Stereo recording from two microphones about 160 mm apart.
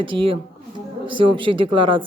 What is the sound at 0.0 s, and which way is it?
A woman's voice, 35° right (ahead or behind).